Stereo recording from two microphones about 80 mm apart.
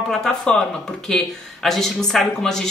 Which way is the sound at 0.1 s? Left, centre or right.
Centre.